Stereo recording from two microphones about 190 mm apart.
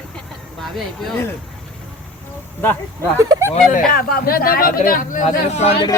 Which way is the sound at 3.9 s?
50° left (ahead or behind).